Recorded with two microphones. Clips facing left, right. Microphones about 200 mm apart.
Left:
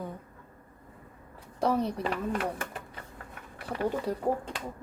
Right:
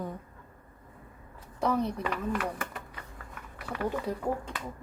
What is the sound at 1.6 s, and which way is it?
Speech, 30° left (ahead or behind).